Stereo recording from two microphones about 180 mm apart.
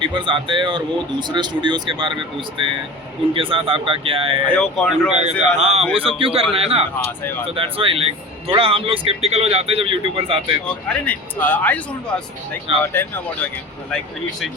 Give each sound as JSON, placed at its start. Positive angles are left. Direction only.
{"t": 0.0, "sound": "speech", "side_deg": -25}
{"t": 4.4, "sound": "speech", "side_deg": 5}
{"t": 5.1, "sound": "speech", "side_deg": -35}
{"t": 10.8, "sound": "a man's voice", "side_deg": 10}
{"t": 12.8, "sound": "a man's voice", "side_deg": 10}